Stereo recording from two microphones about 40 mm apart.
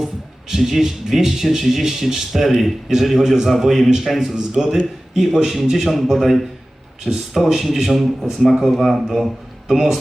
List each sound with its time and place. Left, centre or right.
0.0 s a man's voice: centre